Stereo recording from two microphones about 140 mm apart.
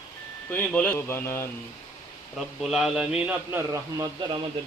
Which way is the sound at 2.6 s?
5° right (ahead or behind).